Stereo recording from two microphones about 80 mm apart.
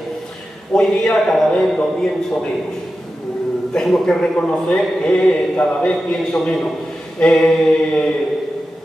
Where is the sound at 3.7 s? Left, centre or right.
Centre.